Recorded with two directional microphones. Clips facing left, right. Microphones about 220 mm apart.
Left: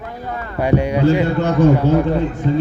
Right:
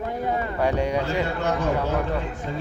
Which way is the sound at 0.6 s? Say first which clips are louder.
Left 8 dB; 5° left (ahead or behind).